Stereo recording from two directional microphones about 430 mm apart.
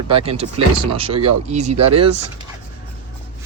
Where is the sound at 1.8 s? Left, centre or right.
Right.